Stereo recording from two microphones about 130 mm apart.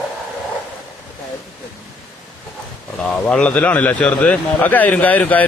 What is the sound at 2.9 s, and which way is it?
Speech, 10° left (ahead or behind).